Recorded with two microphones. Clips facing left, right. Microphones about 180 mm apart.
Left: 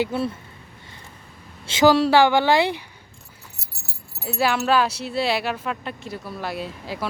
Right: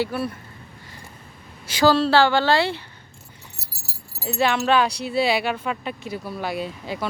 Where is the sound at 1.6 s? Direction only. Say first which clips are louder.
Left 2 dB; 20° left (ahead or behind).